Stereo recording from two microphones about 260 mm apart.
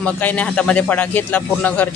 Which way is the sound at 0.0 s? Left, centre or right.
Centre.